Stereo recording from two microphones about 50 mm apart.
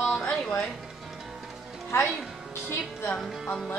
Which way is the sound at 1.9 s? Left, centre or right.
Left.